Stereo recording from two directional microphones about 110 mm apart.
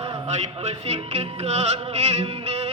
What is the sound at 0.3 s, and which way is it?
Music, 85° right.